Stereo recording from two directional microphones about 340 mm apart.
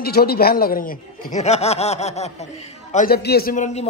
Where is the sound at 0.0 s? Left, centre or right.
Left.